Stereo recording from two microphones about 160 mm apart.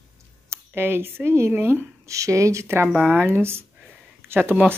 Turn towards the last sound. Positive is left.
turn(degrees=-10)  # may be behind; listen again after turning